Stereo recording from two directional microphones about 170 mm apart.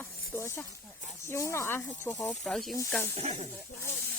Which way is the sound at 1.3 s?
15° left (ahead or behind).